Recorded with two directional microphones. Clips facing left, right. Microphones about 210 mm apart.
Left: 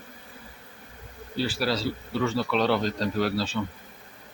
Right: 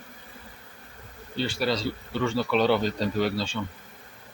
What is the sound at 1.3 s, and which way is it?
A man's voice, 5° left (ahead or behind).